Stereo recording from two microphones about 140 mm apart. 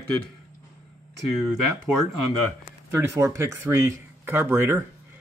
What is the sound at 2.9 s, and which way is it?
Speech, 20° right (ahead or behind).